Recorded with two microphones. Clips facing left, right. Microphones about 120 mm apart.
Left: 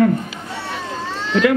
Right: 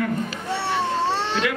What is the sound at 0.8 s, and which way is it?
Cat, 70° right (ahead or behind).